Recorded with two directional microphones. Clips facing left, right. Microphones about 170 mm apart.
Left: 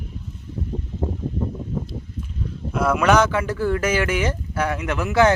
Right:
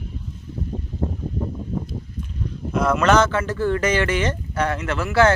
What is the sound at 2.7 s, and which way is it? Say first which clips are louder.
Speech: even; 10° left (ahead or behind).